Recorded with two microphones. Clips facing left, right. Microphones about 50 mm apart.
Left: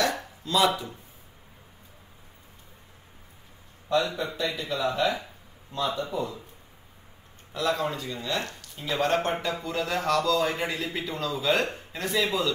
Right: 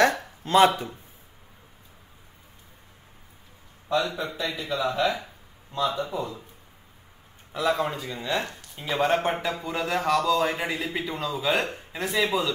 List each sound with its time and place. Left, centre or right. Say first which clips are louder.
0.0 s a sound: right 6 dB; right
0.4 s speech: right 5 dB; right
4.2 s speech: even; centre
7.7 s speech: right 2 dB; centre